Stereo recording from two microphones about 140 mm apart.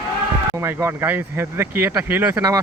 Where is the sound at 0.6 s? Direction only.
15° right (ahead or behind).